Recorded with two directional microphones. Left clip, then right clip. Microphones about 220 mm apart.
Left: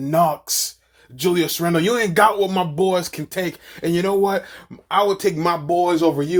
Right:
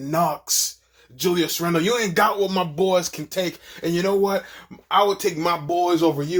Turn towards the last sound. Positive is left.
turn(degrees=35)  # may be behind; listen again after turning